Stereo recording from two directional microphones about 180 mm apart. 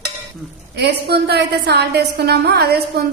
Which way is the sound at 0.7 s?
65° right (ahead or behind).